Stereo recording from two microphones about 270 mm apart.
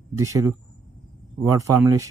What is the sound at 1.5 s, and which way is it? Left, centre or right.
Speech, centre.